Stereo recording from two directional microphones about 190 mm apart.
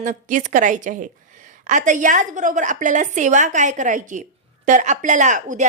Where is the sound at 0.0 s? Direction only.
40° right (ahead or behind).